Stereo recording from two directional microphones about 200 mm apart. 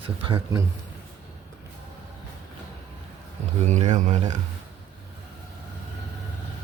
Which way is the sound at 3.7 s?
35° right (ahead or behind).